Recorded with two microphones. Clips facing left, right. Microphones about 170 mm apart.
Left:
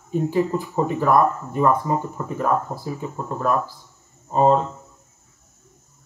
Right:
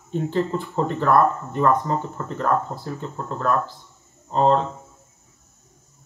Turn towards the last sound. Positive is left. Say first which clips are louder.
# left 1 dB
turn(degrees=5)  # may be behind; listen again after turning